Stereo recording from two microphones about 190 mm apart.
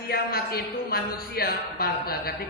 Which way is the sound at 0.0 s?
50° left (ahead or behind).